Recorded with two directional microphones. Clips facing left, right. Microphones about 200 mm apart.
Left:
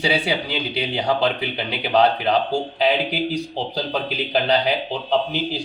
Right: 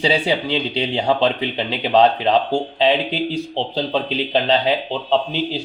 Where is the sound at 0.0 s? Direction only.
25° right (ahead or behind).